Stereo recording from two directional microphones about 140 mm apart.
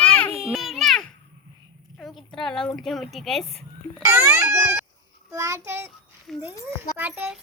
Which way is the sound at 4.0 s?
20° right (ahead or behind).